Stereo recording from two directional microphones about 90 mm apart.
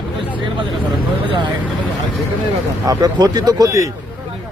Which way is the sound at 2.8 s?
50° right (ahead or behind).